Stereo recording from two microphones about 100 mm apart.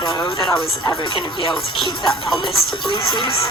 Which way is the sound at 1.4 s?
55° left (ahead or behind).